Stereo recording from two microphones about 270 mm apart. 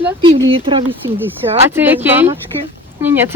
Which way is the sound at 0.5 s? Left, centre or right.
Centre.